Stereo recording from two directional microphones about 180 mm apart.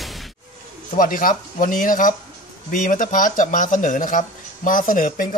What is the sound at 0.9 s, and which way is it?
Speech, 50° left (ahead or behind).